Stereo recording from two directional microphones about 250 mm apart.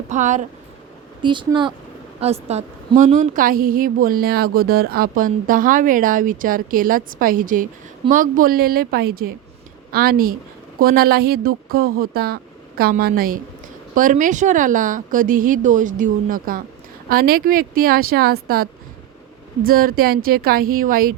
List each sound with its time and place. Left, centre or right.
0.1 s speech: right
1.2 s speech: centre; by 21.2 s right